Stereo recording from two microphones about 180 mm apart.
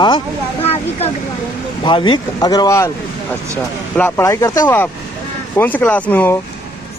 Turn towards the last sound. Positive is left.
turn(degrees=10)  # may be behind; listen again after turning